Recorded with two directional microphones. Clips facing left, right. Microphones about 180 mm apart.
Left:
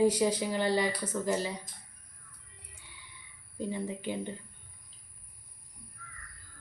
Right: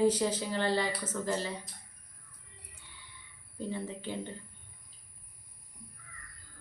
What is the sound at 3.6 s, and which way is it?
Speech, 15° left (ahead or behind).